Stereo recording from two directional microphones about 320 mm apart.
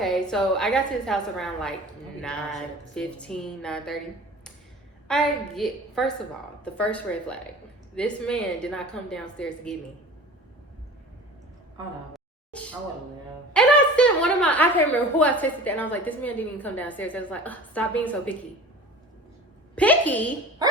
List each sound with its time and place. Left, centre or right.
0.0 s a woman's voice: centre
5.0 s a woman's voice: centre
12.1 s a sound: centre
13.5 s a woman's voice: centre
19.7 s a woman's voice: centre